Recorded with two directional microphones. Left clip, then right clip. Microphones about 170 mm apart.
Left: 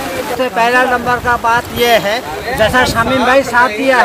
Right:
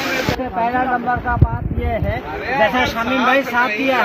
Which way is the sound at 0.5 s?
50° left (ahead or behind).